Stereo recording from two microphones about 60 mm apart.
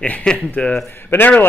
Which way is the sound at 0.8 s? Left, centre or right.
Left.